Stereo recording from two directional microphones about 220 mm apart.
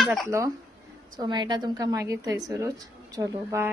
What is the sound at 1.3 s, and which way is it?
Speech, 20° right (ahead or behind).